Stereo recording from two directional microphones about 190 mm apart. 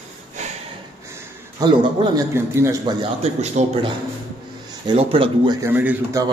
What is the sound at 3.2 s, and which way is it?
Speech, 35° right (ahead or behind).